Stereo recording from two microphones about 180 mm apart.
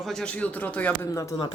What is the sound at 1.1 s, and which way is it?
Speech, 20° left (ahead or behind).